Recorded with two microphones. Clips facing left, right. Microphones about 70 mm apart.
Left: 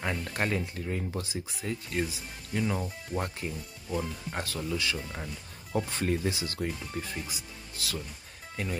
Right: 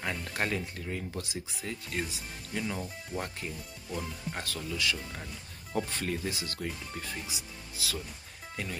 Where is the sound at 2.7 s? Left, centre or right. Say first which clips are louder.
Left 3 dB; centre.